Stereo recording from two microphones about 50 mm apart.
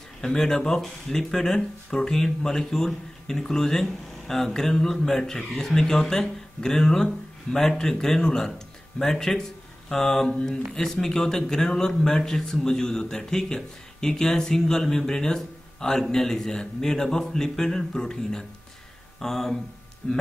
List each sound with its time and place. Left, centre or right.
0.2 s speech: centre
20.0 s speech: centre